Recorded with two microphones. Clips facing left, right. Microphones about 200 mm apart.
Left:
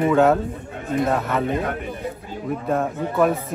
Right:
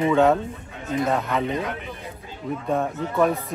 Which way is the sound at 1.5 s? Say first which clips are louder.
Left 3 dB; 50° left (ahead or behind).